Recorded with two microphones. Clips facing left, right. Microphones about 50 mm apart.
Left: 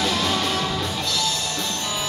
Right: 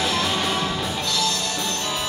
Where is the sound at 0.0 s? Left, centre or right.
Centre.